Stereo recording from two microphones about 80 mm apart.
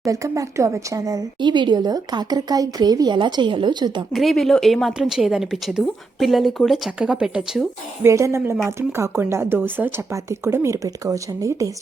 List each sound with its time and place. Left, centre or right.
0.0 s speech: right
1.4 s speech: right
3.2 s a woman's voice: right
4.1 s a woman's voice: centre
8.0 s speech: right
10.1 s speech: right
10.8 s speech: right